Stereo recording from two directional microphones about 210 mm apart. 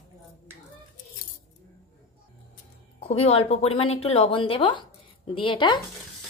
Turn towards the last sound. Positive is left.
turn(degrees=20)  # may be behind; listen again after turning